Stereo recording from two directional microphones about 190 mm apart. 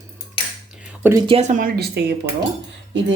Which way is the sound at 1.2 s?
30° right (ahead or behind).